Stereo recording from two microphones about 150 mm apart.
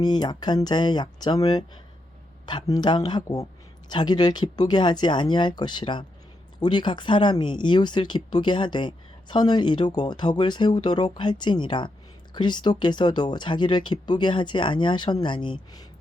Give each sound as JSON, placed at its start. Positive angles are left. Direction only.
{"t": 0.0, "sound": "speech", "side_deg": 30}